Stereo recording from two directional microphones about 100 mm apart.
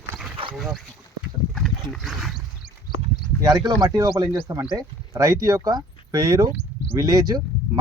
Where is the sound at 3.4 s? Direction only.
40° right (ahead or behind).